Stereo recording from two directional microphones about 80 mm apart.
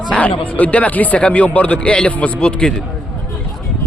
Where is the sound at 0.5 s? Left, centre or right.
Centre.